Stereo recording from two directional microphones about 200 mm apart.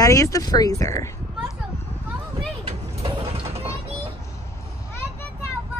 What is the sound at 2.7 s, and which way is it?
Vehicle, 30° right (ahead or behind).